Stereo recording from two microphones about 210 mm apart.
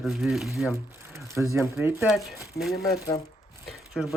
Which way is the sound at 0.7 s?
15° right (ahead or behind).